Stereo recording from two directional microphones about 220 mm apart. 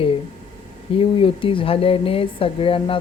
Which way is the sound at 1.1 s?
25° left (ahead or behind).